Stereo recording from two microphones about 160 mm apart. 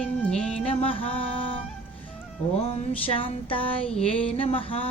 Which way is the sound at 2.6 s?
40° left (ahead or behind).